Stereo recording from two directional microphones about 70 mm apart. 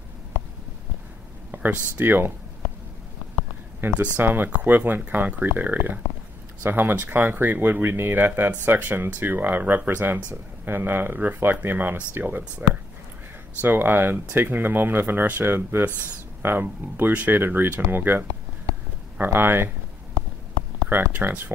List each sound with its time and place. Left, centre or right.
1.5 s speech: right
3.8 s speech: right
13.6 s speech: right
20.9 s speech: right